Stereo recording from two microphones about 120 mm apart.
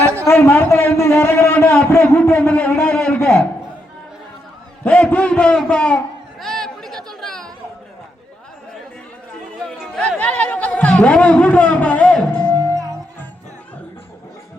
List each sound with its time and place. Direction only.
0.3 s a man's voice: 20° left (ahead or behind)
4.8 s a man's voice: 10° left (ahead or behind)
6.4 s chatter: 5° left (ahead or behind)
10.0 s a sound: 10° left (ahead or behind)